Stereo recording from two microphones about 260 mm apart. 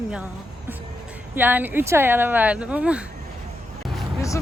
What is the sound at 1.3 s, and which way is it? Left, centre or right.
Speech, centre.